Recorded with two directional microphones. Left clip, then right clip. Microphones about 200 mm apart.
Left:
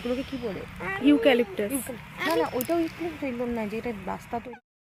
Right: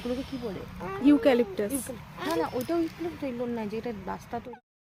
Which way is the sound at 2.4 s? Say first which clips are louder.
Left 1 dB; 55° left (ahead or behind).